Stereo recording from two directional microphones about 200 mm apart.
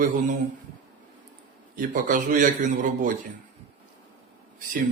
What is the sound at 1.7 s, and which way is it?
A man's voice, 40° right (ahead or behind).